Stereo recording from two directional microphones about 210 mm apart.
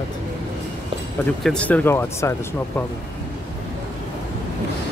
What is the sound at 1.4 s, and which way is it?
Speech, 5° left (ahead or behind).